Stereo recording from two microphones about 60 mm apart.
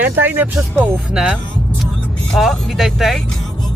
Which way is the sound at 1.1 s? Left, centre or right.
Centre.